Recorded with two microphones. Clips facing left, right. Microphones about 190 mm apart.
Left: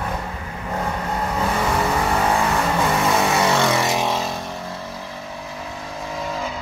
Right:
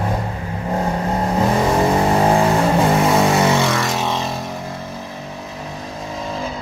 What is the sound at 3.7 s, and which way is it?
Vehicle, 15° left (ahead or behind).